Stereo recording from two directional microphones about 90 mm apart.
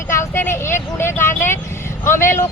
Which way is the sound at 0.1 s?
30° left (ahead or behind).